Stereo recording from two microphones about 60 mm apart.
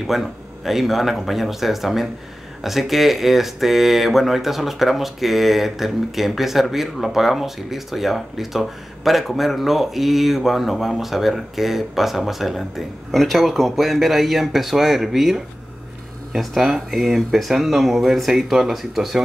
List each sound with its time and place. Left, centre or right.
0.0 s speech: centre